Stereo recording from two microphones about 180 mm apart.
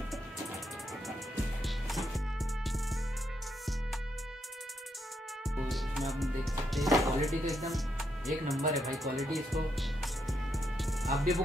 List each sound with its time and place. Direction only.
1.6 s music: centre (ahead or behind)
5.6 s music: centre (ahead or behind)